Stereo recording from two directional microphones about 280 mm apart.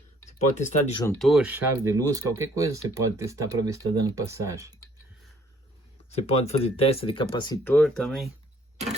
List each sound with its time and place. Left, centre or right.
0.6 s speech: left
1.0 s speech: centre
6.2 s speech: left; by 8.3 s centre